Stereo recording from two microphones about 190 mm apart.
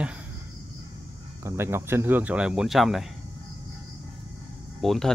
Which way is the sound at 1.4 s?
15° right (ahead or behind).